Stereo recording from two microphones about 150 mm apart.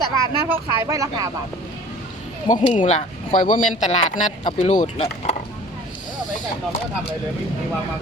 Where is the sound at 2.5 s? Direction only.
55° left (ahead or behind).